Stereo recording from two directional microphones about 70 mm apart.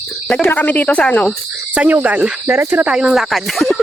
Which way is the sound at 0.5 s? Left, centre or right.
Left.